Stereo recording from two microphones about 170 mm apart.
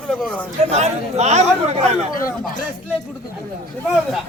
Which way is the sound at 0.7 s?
40° right (ahead or behind).